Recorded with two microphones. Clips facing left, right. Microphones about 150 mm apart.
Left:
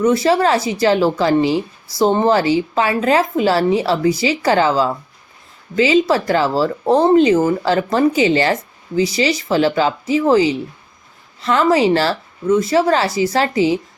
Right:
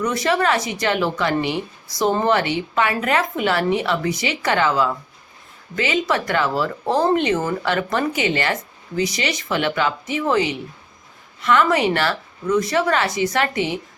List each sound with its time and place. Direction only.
0.0 s a woman's voice: 25° left (ahead or behind)